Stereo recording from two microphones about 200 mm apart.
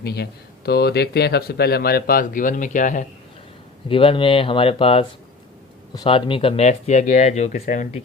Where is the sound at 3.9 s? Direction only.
25° left (ahead or behind).